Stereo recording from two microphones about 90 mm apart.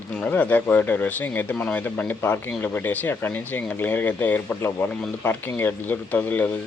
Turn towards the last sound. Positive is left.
turn(degrees=15)  # may be behind; listen again after turning